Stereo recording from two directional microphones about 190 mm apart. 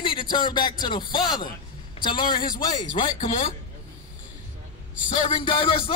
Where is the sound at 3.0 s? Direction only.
40° left (ahead or behind).